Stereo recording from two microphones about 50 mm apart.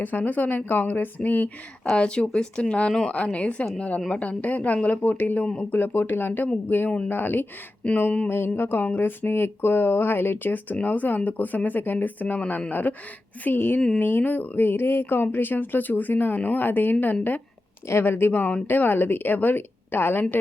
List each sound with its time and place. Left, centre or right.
0.0 s speech: left
2.0 s a woman's voice: centre; by 7.4 s left
7.8 s a woman's voice: left
8.3 s speech: left
13.4 s speech: left
17.8 s speech: left